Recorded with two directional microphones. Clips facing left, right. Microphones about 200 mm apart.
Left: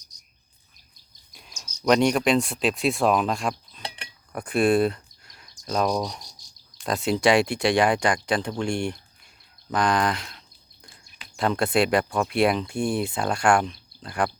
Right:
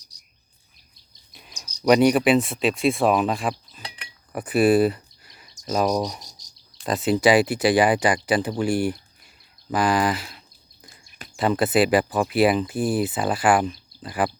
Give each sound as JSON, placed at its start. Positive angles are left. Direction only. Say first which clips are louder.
{"t": 0.1, "sound": "cricket", "louder": "right 1 dB", "side_deg": -35}
{"t": 1.3, "sound": "cricket", "louder": "right 2 dB", "side_deg": 0}
{"t": 1.8, "sound": "speech", "louder": "right 3 dB", "side_deg": -5}
{"t": 4.3, "sound": "cricket", "louder": "right 3 dB", "side_deg": -5}
{"t": 6.2, "sound": "cricket", "louder": "right 1 dB", "side_deg": -40}
{"t": 6.8, "sound": "speech", "louder": "right 2 dB", "side_deg": 0}